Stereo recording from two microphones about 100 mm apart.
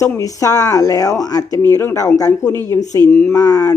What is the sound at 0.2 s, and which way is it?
Speech, 35° left (ahead or behind).